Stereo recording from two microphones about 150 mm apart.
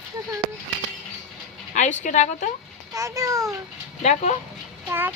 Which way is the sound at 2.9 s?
20° right (ahead or behind).